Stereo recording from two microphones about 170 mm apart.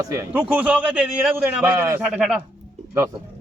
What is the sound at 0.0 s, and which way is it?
A man's voice, 15° right (ahead or behind).